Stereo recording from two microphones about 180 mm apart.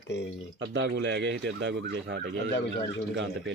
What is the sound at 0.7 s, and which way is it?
A man's voice, 90° right.